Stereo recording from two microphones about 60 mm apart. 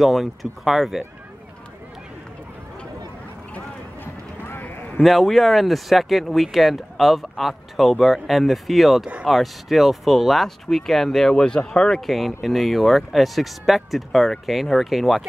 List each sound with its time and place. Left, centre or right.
0.0 s speech: centre
3.5 s clip-clop: left
5.0 s speech: centre